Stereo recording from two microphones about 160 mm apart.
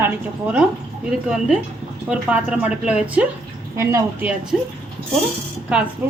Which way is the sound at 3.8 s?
15° right (ahead or behind).